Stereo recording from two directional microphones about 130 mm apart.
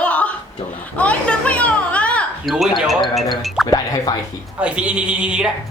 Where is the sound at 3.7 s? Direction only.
25° left (ahead or behind).